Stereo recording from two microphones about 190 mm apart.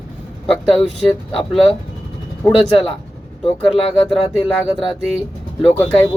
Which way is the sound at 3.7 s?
30° left (ahead or behind).